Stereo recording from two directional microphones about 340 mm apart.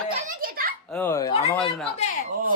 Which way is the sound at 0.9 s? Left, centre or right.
Centre.